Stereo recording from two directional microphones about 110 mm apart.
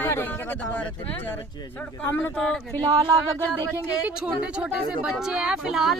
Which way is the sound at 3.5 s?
25° right (ahead or behind).